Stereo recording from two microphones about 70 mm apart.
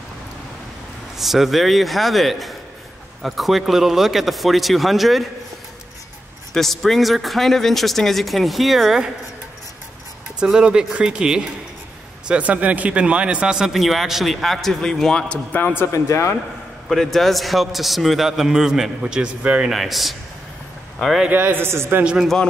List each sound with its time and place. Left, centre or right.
1.1 s speech: centre
6.5 s speech: centre
10.4 s speech: centre
15.5 s a man's voice: left
15.9 s speech: left
16.9 s speech: centre
19.7 s speech: centre
21.3 s a man's voice: right
22.0 s speech: centre